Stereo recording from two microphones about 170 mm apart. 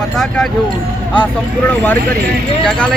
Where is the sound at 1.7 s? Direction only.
10° left (ahead or behind).